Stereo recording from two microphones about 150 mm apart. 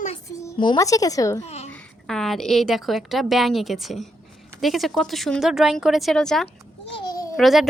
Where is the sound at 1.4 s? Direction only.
45° left (ahead or behind).